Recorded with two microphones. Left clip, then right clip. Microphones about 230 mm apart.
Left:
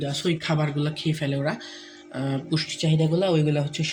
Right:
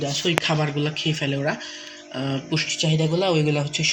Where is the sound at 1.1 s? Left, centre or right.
Left.